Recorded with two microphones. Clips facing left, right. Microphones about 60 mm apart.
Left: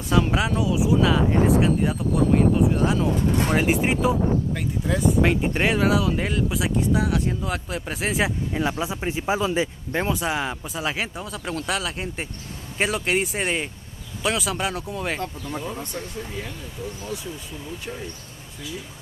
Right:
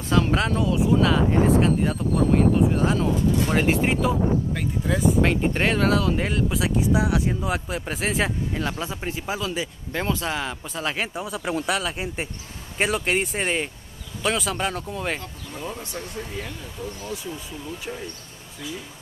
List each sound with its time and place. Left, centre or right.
0.1 s speech: centre
4.6 s speech: centre
8.6 s speech: centre
10.0 s speech: centre